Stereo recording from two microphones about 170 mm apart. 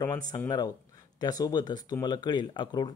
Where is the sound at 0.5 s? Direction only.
20° left (ahead or behind).